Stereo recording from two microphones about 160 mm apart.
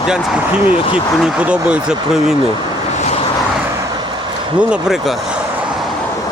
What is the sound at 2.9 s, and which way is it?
Vehicle, 45° left (ahead or behind).